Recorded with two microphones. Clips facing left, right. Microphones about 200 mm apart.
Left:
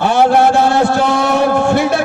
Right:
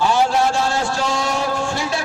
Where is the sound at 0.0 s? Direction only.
60° left (ahead or behind).